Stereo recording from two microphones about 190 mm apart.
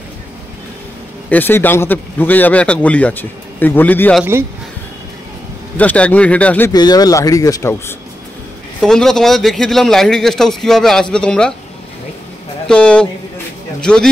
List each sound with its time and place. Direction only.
1.3 s a man's voice: 10° left (ahead or behind)
4.2 s speech: 10° right (ahead or behind)
5.8 s a man's voice: 5° left (ahead or behind)
6.7 s a man's voice: 20° left (ahead or behind)
8.8 s a man's voice: 5° left (ahead or behind)
12.6 s a man's voice: 5° left (ahead or behind)